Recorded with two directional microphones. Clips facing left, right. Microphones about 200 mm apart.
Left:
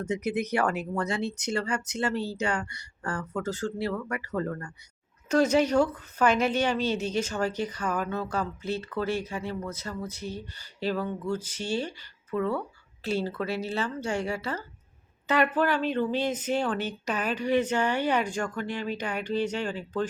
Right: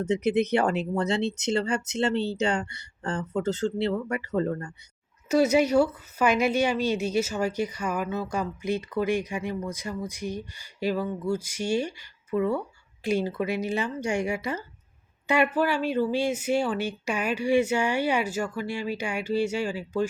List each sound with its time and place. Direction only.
0.0 s speech: 25° right (ahead or behind)
5.3 s a woman's voice: 10° right (ahead or behind)